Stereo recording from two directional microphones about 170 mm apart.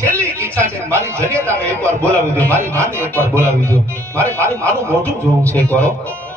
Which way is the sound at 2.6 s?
15° right (ahead or behind).